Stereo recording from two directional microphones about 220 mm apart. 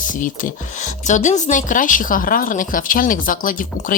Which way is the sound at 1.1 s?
35° left (ahead or behind).